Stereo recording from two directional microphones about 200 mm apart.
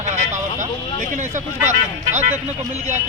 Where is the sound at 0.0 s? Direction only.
35° right (ahead or behind).